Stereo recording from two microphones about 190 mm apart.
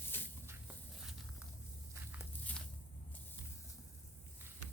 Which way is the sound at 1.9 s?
10° right (ahead or behind).